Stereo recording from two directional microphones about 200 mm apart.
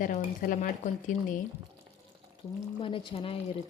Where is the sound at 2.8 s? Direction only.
25° left (ahead or behind).